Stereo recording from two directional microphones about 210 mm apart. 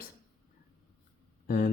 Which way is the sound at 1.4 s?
45° left (ahead or behind).